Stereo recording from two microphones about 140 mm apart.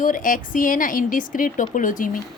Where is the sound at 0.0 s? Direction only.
75° left (ahead or behind).